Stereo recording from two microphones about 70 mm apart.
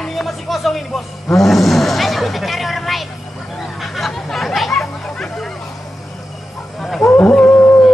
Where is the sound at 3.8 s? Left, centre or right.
Centre.